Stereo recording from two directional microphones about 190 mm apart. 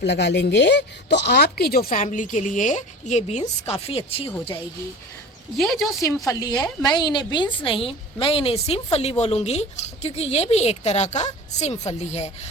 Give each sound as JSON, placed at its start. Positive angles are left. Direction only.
{"t": 0.0, "sound": "speech", "side_deg": 65}
{"t": 5.5, "sound": "speech", "side_deg": 0}
{"t": 6.2, "sound": "a woman's voice", "side_deg": 20}